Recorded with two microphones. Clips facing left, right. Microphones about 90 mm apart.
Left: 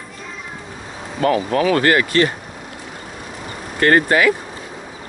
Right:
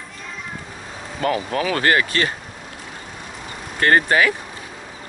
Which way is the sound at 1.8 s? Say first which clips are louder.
Left 2 dB; 25° right (ahead or behind).